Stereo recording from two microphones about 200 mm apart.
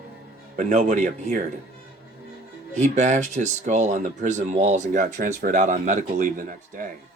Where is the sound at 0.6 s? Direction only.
35° right (ahead or behind).